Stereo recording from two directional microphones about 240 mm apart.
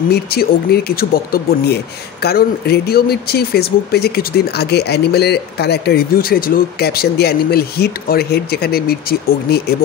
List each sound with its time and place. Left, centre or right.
0.1 s speech: left